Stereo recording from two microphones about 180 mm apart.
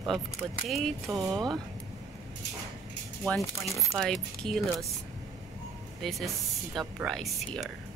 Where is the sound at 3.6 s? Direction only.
15° left (ahead or behind).